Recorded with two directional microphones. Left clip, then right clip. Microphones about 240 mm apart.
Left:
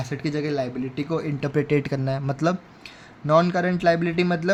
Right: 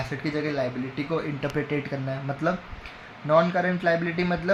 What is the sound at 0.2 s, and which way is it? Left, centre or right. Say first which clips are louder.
Speech: left 2 dB; left.